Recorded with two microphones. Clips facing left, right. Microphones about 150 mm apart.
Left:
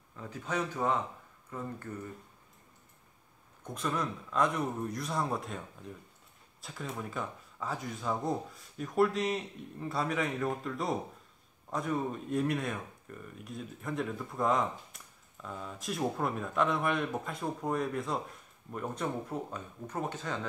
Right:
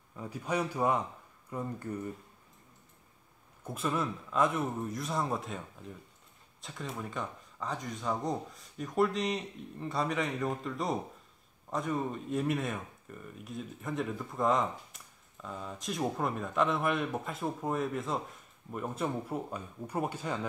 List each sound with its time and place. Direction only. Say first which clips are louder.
0.1 s speech: right 2 dB; 15° right (ahead or behind)
3.6 s speech: right 1 dB; 5° right (ahead or behind)